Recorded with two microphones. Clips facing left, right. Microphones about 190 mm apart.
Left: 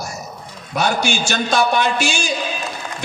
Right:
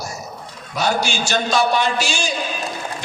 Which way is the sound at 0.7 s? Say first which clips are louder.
Left 1 dB; 55° left (ahead or behind).